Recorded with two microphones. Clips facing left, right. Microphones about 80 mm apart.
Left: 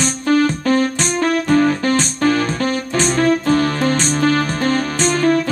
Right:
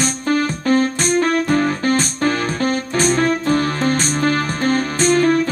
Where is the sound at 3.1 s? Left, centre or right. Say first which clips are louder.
Left 3 dB; right.